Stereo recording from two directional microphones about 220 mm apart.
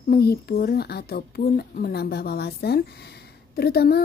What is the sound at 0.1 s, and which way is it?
Speech, 45° left (ahead or behind).